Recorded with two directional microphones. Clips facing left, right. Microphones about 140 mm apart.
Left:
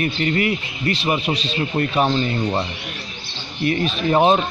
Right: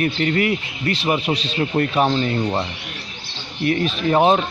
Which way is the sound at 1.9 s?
Centre (ahead or behind).